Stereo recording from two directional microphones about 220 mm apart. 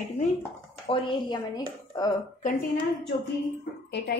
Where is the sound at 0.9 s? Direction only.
20° left (ahead or behind).